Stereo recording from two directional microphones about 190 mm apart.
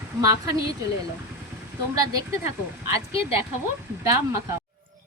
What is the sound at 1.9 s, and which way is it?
Speech, 20° right (ahead or behind).